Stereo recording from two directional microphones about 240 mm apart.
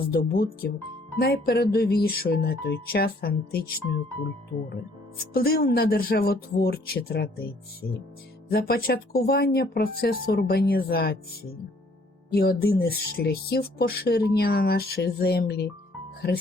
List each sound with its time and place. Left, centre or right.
0.1 s speech: left
5.3 s speech: left
12.3 s speech: left